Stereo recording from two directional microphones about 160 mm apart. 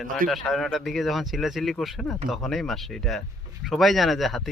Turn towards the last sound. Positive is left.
turn(degrees=0)  # may be behind; listen again after turning